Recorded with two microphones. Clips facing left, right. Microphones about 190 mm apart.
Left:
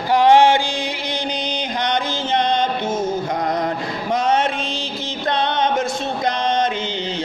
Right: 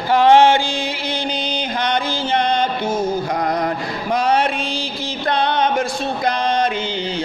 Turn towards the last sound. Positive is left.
turn(degrees=20)  # may be behind; listen again after turning